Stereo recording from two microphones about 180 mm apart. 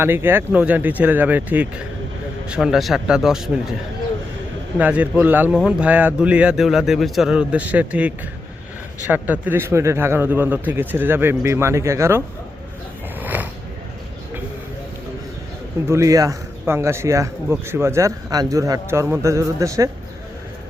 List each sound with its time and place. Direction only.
0.0 s a man's voice: 10° right (ahead or behind)
4.8 s a man's voice: 10° right (ahead or behind)
13.1 s a sound: 10° right (ahead or behind)
15.9 s a man's voice: 15° right (ahead or behind)